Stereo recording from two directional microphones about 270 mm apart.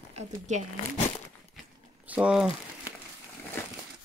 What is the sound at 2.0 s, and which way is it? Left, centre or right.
Speech, centre.